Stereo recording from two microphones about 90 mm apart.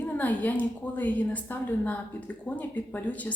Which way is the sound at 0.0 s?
20° left (ahead or behind).